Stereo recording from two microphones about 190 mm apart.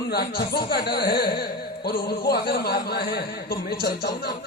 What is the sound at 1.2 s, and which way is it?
Music, 55° left (ahead or behind).